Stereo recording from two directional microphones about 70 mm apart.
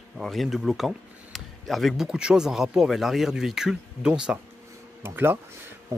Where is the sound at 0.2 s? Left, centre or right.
Centre.